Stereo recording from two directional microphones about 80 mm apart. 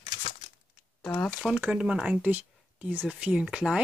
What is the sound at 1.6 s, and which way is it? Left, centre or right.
Speech, centre.